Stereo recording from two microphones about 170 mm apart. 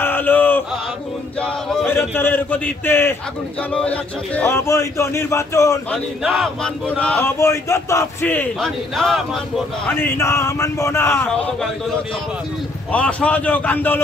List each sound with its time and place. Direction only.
0.0 s chant: 10° left (ahead or behind)
1.4 s male singing: 5° left (ahead or behind)
1.9 s speech: 15° left (ahead or behind)
6.2 s speech: centre (ahead or behind)
9.8 s speech: 15° left (ahead or behind)
12.9 s speech: 10° left (ahead or behind)